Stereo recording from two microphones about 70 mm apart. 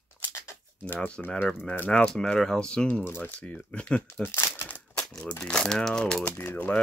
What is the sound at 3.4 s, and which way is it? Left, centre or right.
Speech, centre.